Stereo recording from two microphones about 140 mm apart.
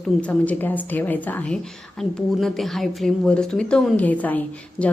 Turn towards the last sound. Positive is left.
turn(degrees=10)  # may be behind; listen again after turning